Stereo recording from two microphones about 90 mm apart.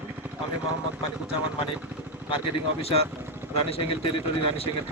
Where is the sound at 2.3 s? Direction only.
85° left.